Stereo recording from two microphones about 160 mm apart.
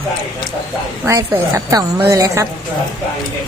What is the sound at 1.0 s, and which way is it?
A woman's voice, 20° right (ahead or behind).